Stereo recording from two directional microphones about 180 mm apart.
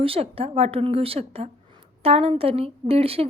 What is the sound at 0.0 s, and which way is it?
A woman's voice, 30° right (ahead or behind).